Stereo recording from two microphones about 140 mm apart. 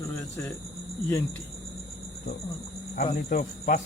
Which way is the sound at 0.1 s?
15° left (ahead or behind).